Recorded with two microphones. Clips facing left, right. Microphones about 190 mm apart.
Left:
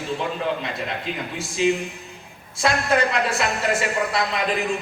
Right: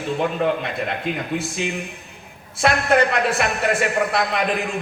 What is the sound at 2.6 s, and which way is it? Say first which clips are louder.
A man's voice: right 3 dB; 60° right (ahead or behind).